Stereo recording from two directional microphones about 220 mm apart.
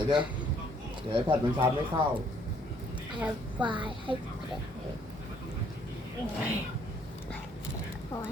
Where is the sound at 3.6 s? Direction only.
20° right (ahead or behind).